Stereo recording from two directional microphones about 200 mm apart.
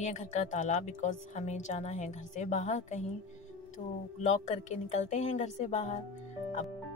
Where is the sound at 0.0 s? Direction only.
35° left (ahead or behind).